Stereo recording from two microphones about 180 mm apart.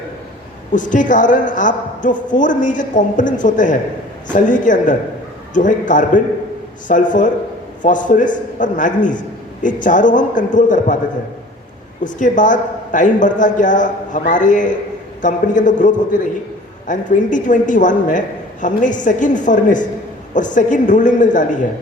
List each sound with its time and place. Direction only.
0.7 s a woman's voice: 45° left (ahead or behind)
12.0 s a woman's voice: 45° left (ahead or behind)